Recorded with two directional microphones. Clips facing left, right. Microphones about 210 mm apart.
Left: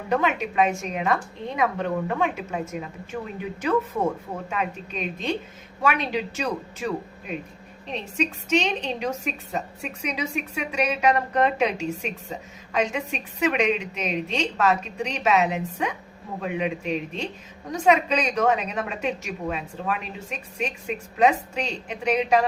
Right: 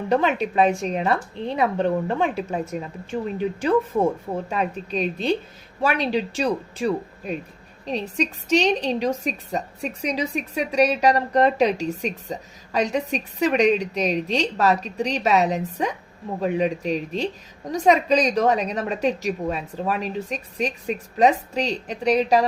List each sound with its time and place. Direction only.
0.1 s a woman's voice: 35° right (ahead or behind)
4.4 s a woman's voice: 35° right (ahead or behind)